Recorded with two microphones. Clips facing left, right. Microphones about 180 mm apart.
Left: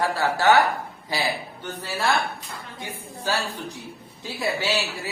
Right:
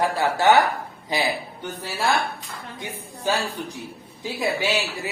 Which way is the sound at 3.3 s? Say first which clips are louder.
Right 3 dB; 20° right (ahead or behind).